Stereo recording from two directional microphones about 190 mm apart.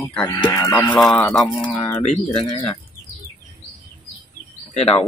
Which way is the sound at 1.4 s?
25° left (ahead or behind).